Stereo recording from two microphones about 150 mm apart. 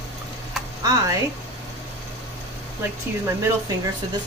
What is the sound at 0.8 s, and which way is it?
Speech, 25° right (ahead or behind).